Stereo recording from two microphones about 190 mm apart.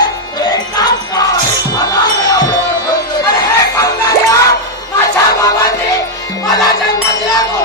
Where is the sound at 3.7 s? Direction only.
15° left (ahead or behind).